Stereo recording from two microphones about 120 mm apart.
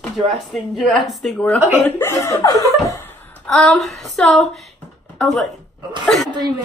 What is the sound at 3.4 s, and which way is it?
Speech, 5° left (ahead or behind).